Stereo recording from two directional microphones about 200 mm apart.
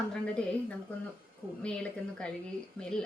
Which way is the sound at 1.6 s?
5° left (ahead or behind).